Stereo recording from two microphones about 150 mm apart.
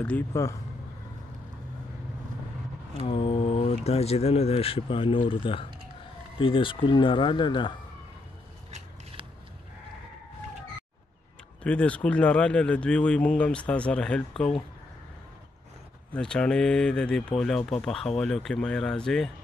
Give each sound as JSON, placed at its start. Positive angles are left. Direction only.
{"t": 0.0, "sound": "speech", "side_deg": 10}
{"t": 3.0, "sound": "speech", "side_deg": 35}
{"t": 11.6, "sound": "speech", "side_deg": 10}
{"t": 16.1, "sound": "speech", "side_deg": 5}